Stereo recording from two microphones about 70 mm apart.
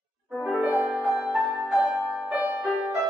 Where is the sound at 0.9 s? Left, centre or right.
Centre.